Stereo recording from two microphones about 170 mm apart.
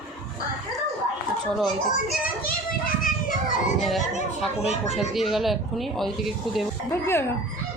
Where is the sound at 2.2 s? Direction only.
55° left (ahead or behind).